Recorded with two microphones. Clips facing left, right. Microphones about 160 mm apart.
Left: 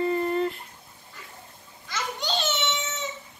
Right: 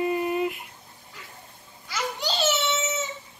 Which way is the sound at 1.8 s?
5° right (ahead or behind).